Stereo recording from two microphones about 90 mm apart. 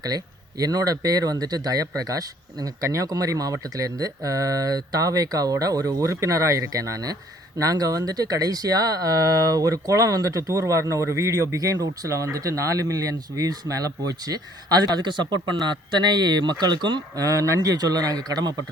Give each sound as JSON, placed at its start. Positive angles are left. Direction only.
{"t": 0.6, "sound": "a man's voice", "side_deg": -45}
{"t": 17.2, "sound": "a man's voice", "side_deg": -40}